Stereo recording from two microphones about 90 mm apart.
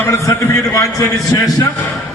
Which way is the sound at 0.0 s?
35° left (ahead or behind).